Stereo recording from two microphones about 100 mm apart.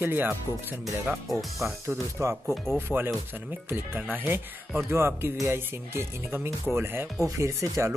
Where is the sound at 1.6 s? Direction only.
25° right (ahead or behind).